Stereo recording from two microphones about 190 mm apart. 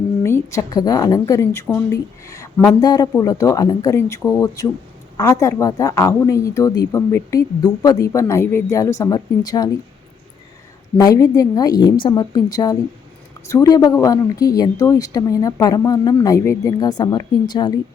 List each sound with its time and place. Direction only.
0.2 s a woman's voice: 15° left (ahead or behind)
10.9 s a woman's voice: 20° left (ahead or behind)